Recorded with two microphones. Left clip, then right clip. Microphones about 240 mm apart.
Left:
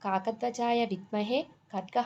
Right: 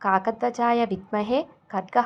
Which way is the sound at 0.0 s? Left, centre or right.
Centre.